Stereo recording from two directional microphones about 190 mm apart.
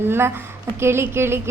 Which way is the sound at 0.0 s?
10° right (ahead or behind).